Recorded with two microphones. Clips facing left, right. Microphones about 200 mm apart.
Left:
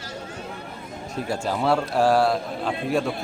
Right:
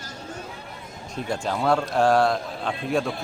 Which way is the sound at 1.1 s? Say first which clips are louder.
Left 1 dB; 5° left (ahead or behind).